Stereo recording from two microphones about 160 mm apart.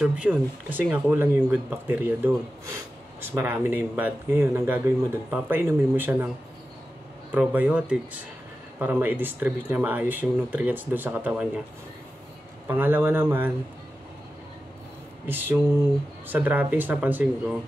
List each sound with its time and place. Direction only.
0.0 s speech: 10° right (ahead or behind)
7.3 s speech: 10° right (ahead or behind)
12.6 s speech: 15° right (ahead or behind)
15.2 s speech: 15° right (ahead or behind)